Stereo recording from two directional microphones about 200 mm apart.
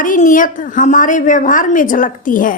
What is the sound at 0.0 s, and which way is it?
A woman's voice, 40° left (ahead or behind).